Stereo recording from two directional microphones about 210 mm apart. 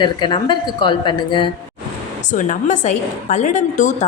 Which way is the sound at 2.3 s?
35° left (ahead or behind).